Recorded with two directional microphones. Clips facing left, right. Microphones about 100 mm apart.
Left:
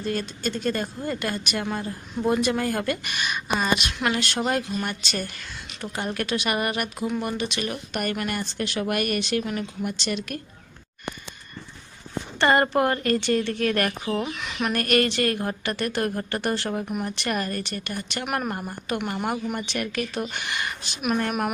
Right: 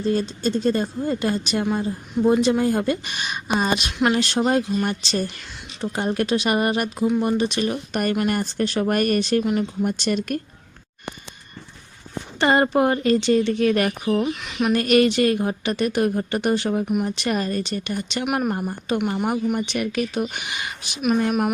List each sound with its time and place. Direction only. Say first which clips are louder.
0.0 s speech: right 6 dB; 30° right (ahead or behind)
12.4 s speech: right 2 dB; 15° right (ahead or behind)
14.2 s speech: right 5 dB; centre (ahead or behind)
14.8 s speech: right 5 dB; 20° right (ahead or behind)
18.3 s speech: right 5 dB; 5° right (ahead or behind)
21.0 s speech: right 5 dB; centre (ahead or behind)